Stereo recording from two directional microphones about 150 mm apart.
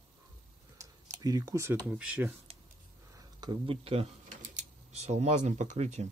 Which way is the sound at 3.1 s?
30° right (ahead or behind).